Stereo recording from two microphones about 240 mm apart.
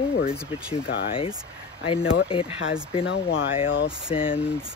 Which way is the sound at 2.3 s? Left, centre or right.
Left.